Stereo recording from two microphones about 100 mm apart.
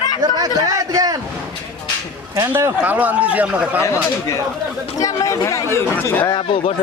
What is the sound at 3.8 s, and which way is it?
Speech, 30° left (ahead or behind).